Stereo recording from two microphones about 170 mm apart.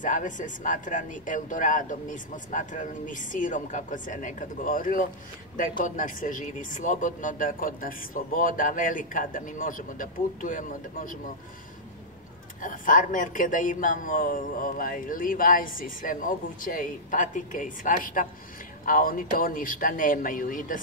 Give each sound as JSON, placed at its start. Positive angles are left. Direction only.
{"t": 0.0, "sound": "a man's voice", "side_deg": 50}
{"t": 12.6, "sound": "a man's voice", "side_deg": 50}